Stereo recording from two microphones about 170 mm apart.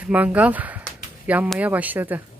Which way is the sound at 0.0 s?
10° right (ahead or behind).